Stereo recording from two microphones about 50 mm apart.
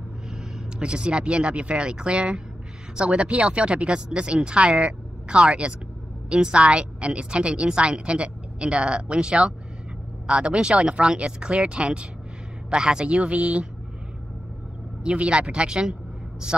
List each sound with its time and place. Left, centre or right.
0.7 s a woman's voice: right
15.0 s a woman's voice: right